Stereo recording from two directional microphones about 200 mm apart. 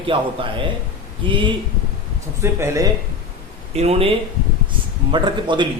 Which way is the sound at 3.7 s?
30° right (ahead or behind).